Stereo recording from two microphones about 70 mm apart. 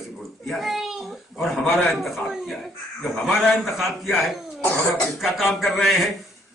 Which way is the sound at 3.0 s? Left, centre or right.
Centre.